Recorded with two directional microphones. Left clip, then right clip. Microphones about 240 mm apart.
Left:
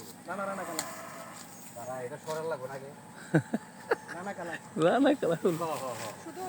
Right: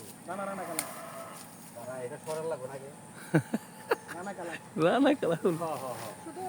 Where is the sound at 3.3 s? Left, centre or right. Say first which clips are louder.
Even; centre.